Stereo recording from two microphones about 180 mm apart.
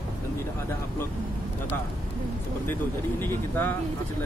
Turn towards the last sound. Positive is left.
turn(degrees=10)  # may be behind; listen again after turning